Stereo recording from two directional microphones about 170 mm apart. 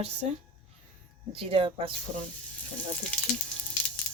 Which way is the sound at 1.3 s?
35° right (ahead or behind).